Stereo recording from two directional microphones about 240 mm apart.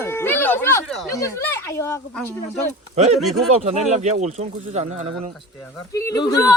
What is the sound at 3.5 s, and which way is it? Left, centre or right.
Speech, right.